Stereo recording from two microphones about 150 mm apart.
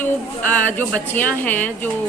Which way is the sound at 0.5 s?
10° left (ahead or behind).